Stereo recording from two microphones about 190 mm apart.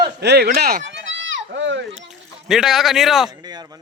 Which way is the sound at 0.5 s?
45° right (ahead or behind).